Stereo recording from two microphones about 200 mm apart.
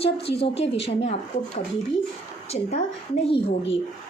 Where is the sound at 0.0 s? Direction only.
30° left (ahead or behind).